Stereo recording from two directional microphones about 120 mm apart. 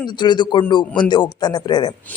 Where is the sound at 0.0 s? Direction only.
40° left (ahead or behind).